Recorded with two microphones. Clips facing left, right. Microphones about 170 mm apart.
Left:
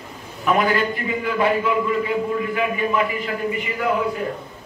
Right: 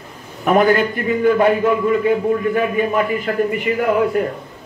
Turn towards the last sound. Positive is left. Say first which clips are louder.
# right 6 dB
turn(degrees=-55)  # may be behind; listen again after turning